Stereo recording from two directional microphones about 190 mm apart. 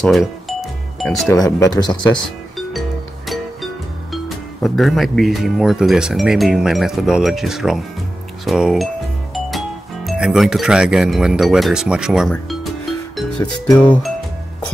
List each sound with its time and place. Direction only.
0.0 s doorbell: centre (ahead or behind)
1.3 s speech: 20° left (ahead or behind)
4.1 s speech: centre (ahead or behind)
10.0 s speech: centre (ahead or behind)
13.7 s music: 10° left (ahead or behind)